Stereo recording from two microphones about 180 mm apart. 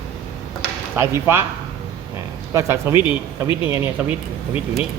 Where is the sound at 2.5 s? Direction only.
15° right (ahead or behind).